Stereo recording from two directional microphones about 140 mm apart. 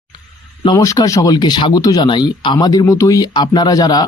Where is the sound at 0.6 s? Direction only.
25° left (ahead or behind).